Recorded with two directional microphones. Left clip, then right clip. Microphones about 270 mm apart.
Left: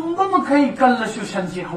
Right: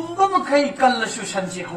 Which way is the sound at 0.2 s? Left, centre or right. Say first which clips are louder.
Even; right.